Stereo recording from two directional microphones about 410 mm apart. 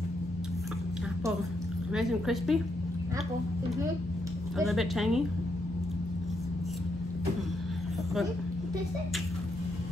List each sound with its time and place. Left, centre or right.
2.0 s a woman's voice: centre
4.6 s a woman's voice: centre